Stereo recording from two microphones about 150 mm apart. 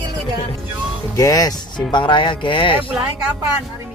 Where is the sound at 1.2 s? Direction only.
25° left (ahead or behind).